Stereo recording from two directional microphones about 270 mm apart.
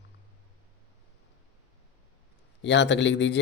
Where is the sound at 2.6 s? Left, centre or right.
Left.